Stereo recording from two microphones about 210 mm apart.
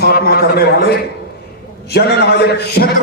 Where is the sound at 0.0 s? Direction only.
50° left (ahead or behind).